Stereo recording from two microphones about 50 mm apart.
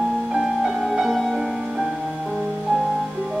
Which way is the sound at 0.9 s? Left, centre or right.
Centre.